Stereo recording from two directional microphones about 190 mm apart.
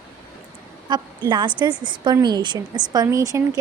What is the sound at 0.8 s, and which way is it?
A woman's voice, 25° right (ahead or behind).